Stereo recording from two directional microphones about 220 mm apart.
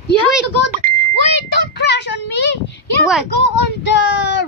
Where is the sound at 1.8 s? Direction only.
50° left (ahead or behind).